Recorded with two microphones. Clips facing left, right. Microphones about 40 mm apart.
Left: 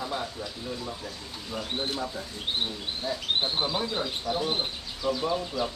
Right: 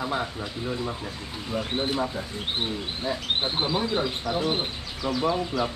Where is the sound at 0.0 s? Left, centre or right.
Right.